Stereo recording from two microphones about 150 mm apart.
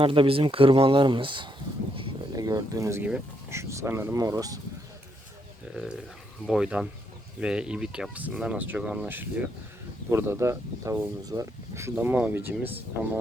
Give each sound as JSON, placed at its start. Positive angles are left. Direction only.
{"t": 0.0, "sound": "speech", "side_deg": -35}
{"t": 6.5, "sound": "speech", "side_deg": -5}